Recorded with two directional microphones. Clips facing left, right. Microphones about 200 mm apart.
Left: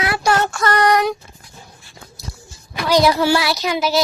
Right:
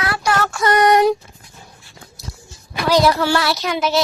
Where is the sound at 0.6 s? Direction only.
20° right (ahead or behind).